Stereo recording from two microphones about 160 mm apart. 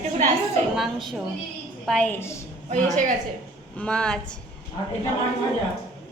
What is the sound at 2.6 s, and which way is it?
Speech, 50° right (ahead or behind).